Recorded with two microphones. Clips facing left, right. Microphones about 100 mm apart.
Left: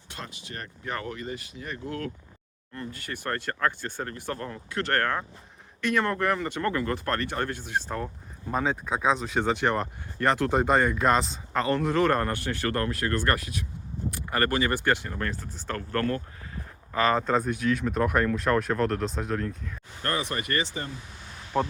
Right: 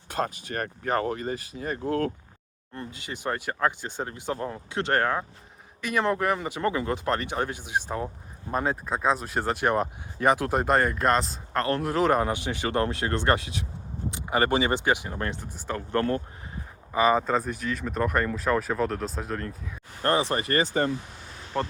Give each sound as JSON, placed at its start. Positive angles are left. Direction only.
{"t": 0.1, "sound": "speech", "side_deg": -45}
{"t": 0.9, "sound": "speech", "side_deg": -35}
{"t": 2.7, "sound": "speech", "side_deg": -20}
{"t": 16.9, "sound": "speech", "side_deg": -10}
{"t": 20.0, "sound": "speech", "side_deg": -30}
{"t": 21.5, "sound": "speech", "side_deg": 5}